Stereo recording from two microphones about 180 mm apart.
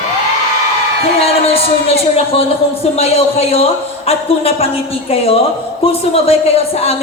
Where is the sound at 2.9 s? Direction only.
35° left (ahead or behind).